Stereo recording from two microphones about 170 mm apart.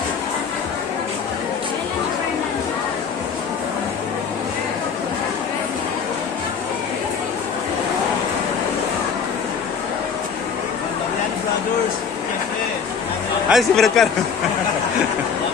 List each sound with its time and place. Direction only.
13.5 s a man's voice: centre (ahead or behind)